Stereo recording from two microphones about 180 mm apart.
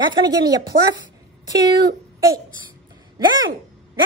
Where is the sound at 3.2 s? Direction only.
25° right (ahead or behind).